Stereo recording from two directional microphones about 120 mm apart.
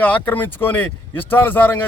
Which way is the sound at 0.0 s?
15° left (ahead or behind).